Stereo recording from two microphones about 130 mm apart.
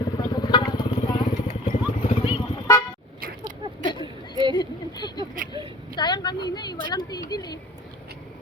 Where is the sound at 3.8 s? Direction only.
35° left (ahead or behind).